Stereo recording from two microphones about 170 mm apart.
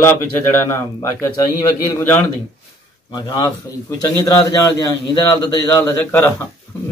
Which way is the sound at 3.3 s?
25° left (ahead or behind).